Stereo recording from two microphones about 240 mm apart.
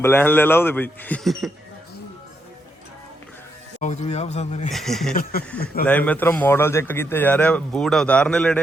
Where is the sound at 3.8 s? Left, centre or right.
Left.